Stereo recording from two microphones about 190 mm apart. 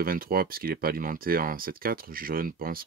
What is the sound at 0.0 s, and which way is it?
Speech, 50° right (ahead or behind).